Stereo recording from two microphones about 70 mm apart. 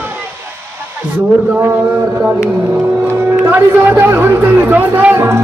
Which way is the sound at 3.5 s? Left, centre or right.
Right.